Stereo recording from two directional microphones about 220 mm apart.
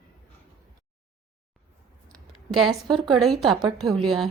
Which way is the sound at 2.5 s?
Centre (ahead or behind).